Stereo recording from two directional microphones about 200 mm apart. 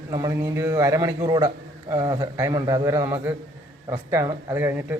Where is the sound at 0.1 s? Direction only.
15° right (ahead or behind).